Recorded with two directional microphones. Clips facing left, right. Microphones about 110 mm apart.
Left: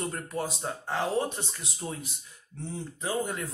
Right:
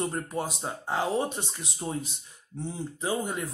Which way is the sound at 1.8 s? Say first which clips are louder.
Right 3 dB; 30° right (ahead or behind).